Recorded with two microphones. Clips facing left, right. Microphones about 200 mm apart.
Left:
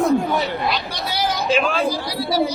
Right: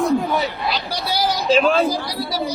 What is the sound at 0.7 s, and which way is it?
Speech, 40° right (ahead or behind).